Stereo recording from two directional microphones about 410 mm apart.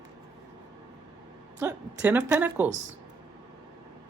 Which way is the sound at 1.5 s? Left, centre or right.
Centre.